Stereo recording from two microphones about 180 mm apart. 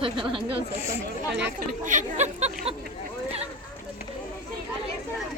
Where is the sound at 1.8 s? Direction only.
45° right (ahead or behind).